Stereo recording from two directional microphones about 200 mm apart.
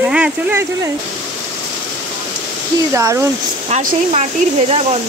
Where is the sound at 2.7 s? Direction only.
15° right (ahead or behind).